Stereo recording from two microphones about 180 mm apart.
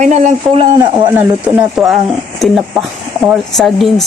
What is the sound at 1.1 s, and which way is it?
Speech, 5° right (ahead or behind).